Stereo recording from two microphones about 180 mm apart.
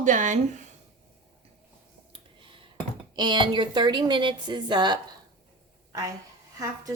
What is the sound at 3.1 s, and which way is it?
A woman's voice, 25° right (ahead or behind).